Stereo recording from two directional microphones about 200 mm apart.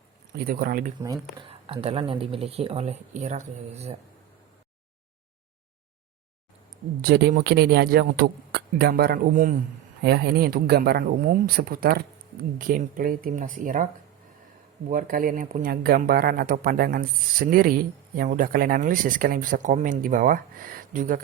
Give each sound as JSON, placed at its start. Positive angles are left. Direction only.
{"t": 0.3, "sound": "speech", "side_deg": -45}
{"t": 1.4, "sound": "speech", "side_deg": -25}
{"t": 7.0, "sound": "speech", "side_deg": -50}
{"t": 10.0, "sound": "speech", "side_deg": -55}
{"t": 14.8, "sound": "speech", "side_deg": -45}